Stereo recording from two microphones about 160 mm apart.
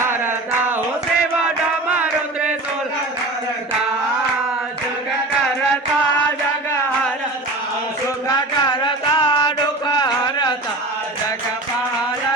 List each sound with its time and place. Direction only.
9.1 s music: 30° left (ahead or behind)